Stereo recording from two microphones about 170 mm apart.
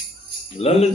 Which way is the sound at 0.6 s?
35° left (ahead or behind).